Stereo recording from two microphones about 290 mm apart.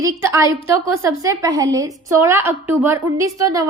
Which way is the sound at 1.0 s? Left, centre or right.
Centre.